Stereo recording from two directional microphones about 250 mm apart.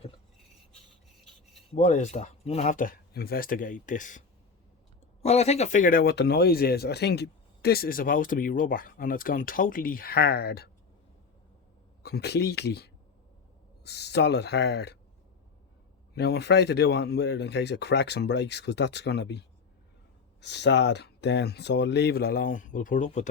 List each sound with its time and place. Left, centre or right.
1.7 s speech: left
5.2 s speech: left
12.0 s speech: left
16.1 s speech: left